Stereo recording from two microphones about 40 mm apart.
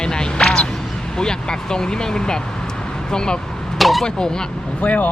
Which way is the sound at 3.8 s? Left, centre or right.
Centre.